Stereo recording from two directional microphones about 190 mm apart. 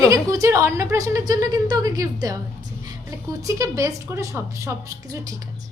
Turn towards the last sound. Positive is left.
turn(degrees=-15)  # may be behind; listen again after turning